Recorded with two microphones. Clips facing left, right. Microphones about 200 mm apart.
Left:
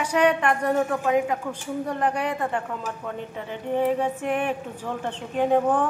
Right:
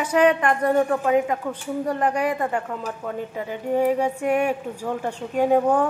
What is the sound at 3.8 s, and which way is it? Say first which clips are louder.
Speech: right 2 dB; 10° right (ahead or behind).